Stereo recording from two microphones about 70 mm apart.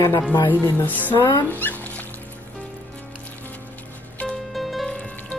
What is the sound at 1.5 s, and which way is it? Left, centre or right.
Dog, left.